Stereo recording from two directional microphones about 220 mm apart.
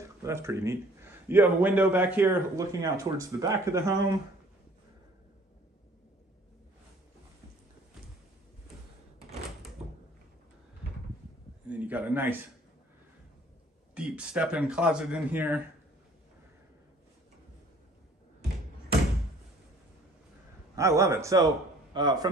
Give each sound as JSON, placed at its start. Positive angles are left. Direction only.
{"t": 0.0, "sound": "a man's voice", "side_deg": -10}
{"t": 11.6, "sound": "a sound", "side_deg": -5}
{"t": 13.9, "sound": "speech", "side_deg": -5}
{"t": 20.7, "sound": "a man's voice", "side_deg": -15}